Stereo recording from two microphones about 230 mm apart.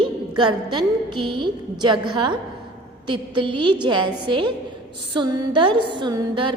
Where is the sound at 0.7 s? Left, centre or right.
Centre.